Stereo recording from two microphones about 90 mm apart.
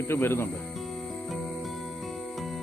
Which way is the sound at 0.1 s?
25° left (ahead or behind).